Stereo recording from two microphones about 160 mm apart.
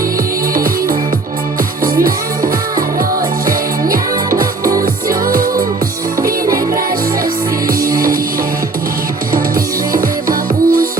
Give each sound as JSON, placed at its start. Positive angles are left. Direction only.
{"t": 0.5, "sound": "music", "side_deg": -65}
{"t": 3.4, "sound": "music", "side_deg": -65}
{"t": 7.7, "sound": "music", "side_deg": -65}
{"t": 9.9, "sound": "music", "side_deg": -60}